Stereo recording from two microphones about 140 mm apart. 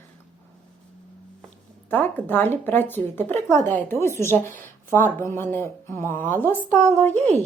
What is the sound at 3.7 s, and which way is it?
A woman's voice, 15° left (ahead or behind).